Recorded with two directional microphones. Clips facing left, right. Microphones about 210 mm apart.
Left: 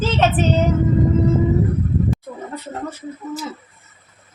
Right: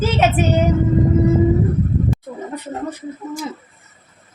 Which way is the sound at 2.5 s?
15° right (ahead or behind).